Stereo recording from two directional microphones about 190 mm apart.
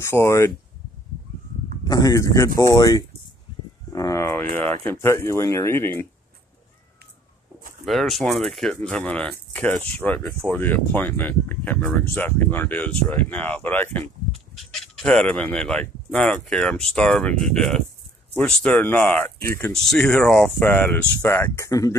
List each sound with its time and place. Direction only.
0.0 s speech: 15° left (ahead or behind)
1.9 s speech: 20° left (ahead or behind)
3.9 s a sound: 15° left (ahead or behind)
4.8 s speech: 15° left (ahead or behind)
7.8 s speech: centre (ahead or behind); by 21.9 s 15° left (ahead or behind)